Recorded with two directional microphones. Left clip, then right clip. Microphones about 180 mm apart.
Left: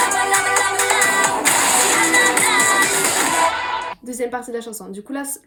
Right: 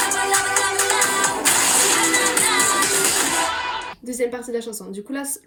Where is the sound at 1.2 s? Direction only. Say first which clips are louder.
Left 3 dB; 35° left (ahead or behind).